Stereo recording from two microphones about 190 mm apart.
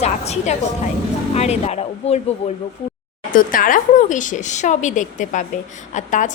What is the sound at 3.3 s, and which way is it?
A woman's voice, 45° left (ahead or behind).